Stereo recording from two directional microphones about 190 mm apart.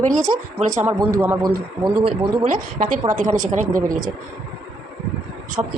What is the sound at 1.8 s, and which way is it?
Speech, 25° right (ahead or behind).